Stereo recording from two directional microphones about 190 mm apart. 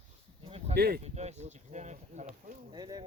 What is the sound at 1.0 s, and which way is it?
Speech, 35° right (ahead or behind).